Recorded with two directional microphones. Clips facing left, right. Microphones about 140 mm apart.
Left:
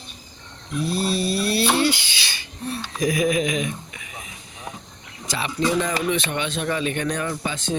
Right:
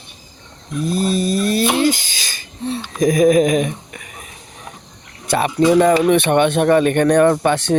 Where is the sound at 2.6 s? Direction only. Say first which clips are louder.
Right 6 dB; 25° right (ahead or behind).